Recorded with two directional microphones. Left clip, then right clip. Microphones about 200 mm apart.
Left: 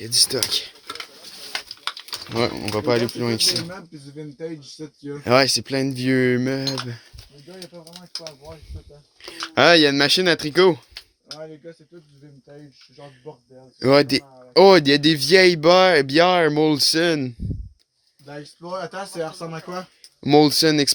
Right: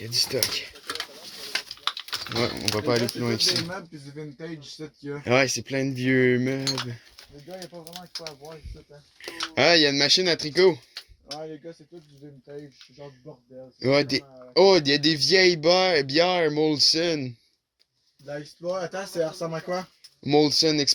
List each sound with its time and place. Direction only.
0.0 s speech: 20° left (ahead or behind)
2.4 s speech: 35° left (ahead or behind)
5.2 s speech: 30° left (ahead or behind)
9.6 s a man's voice: 35° left (ahead or behind)
13.7 s a man's voice: 40° left (ahead or behind)
20.2 s speech: 45° left (ahead or behind)